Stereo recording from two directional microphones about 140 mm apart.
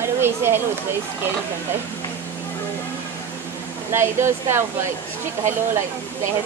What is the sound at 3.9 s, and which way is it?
Speech, 20° right (ahead or behind).